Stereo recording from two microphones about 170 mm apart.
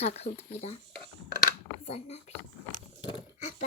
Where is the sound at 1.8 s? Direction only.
40° left (ahead or behind).